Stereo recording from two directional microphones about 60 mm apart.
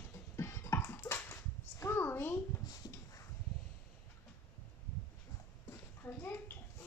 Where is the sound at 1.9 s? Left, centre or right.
Left.